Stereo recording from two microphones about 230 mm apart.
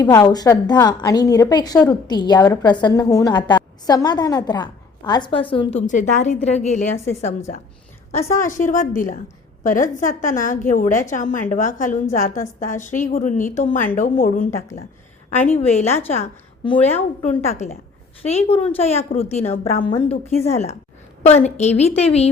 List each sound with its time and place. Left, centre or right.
0.0 s a woman's voice: centre